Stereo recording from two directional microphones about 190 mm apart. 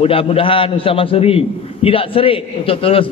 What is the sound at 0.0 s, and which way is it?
A man's voice, 30° left (ahead or behind).